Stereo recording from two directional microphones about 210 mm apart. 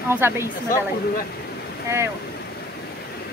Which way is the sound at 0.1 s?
10° right (ahead or behind).